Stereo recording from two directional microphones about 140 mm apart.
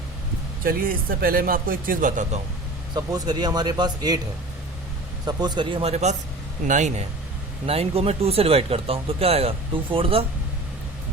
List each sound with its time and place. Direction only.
0.6 s speech: 90° right; by 2.4 s 65° right (ahead or behind)
2.9 s speech: 30° right (ahead or behind)
5.2 s speech: 30° right (ahead or behind)
5.9 s a man's voice: 55° right (ahead or behind)
7.7 s speech: 45° right (ahead or behind)